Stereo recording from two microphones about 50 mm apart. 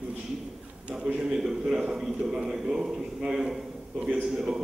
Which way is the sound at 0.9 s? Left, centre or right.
Right.